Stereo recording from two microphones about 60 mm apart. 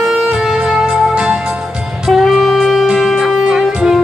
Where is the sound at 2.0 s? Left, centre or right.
Centre.